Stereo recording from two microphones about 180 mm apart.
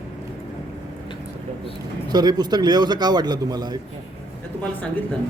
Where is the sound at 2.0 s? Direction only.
25° right (ahead or behind).